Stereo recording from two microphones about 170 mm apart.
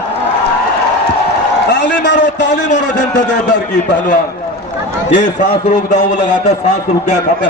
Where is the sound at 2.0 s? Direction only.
90° left.